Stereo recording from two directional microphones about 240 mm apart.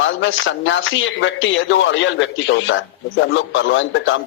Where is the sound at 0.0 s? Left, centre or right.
Left.